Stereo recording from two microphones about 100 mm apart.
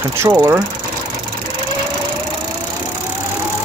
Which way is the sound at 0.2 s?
20° right (ahead or behind).